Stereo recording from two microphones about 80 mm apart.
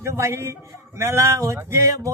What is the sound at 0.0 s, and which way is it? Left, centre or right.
A man's voice, right.